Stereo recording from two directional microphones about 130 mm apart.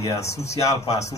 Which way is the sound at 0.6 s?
25° left (ahead or behind).